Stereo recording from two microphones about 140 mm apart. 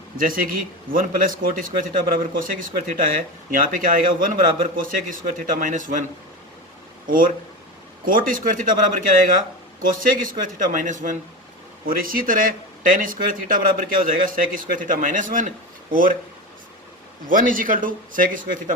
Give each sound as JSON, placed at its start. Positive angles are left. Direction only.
{"t": 0.2, "sound": "speech", "side_deg": -85}
{"t": 7.1, "sound": "speech", "side_deg": -85}
{"t": 11.9, "sound": "speech", "side_deg": -90}
{"t": 17.2, "sound": "speech", "side_deg": -75}